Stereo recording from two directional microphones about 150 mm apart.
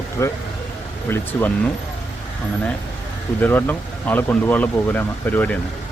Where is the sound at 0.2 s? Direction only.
20° left (ahead or behind).